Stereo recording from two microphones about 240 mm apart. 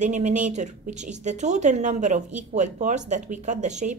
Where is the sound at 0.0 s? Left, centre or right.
Right.